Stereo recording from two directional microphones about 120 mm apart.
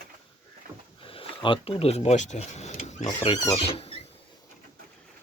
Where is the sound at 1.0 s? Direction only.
50° left (ahead or behind); by 3.1 s 70° left (ahead or behind).